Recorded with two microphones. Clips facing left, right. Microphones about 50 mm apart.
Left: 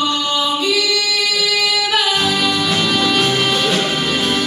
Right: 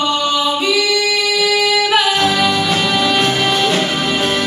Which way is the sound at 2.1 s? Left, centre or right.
Centre.